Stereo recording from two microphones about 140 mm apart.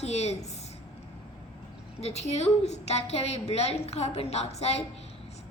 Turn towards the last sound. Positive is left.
turn(degrees=50)  # may be behind; listen again after turning